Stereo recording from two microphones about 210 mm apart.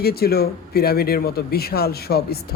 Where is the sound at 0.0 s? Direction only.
45° left (ahead or behind).